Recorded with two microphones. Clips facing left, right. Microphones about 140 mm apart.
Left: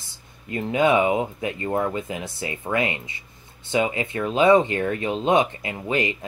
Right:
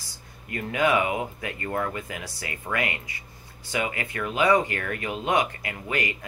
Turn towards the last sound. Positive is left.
turn(degrees=25)  # may be behind; listen again after turning